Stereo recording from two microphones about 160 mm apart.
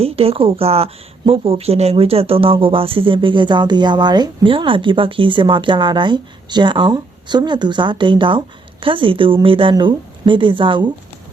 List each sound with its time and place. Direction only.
0.0 s speech: 35° right (ahead or behind)